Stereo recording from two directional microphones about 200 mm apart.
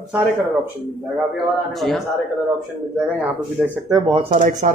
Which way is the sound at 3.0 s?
5° right (ahead or behind).